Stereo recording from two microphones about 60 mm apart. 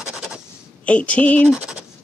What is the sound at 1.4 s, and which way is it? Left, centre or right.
Speech, centre.